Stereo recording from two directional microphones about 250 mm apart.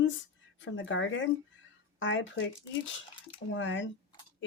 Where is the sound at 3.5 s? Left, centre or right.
Left.